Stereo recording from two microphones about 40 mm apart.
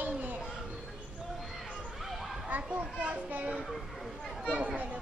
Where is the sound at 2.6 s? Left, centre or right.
Right.